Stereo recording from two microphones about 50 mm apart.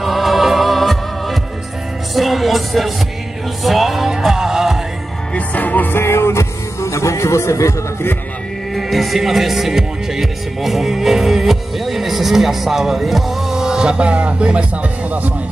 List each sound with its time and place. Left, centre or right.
0.0 s music: centre
5.3 s music: left
5.9 s music: left
8.7 s music: centre; by 15.3 s right